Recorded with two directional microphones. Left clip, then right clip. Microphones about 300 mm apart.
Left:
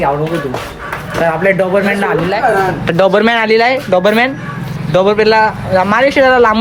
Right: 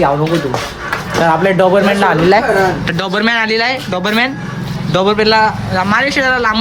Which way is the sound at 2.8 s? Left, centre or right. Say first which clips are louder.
Left 5 dB; centre.